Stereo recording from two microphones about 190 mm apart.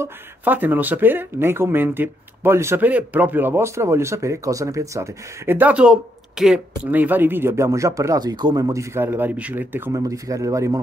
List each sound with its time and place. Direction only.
0.0 s speech: 10° right (ahead or behind)